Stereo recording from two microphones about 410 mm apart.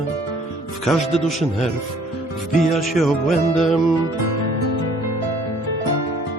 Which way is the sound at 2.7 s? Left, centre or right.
Centre.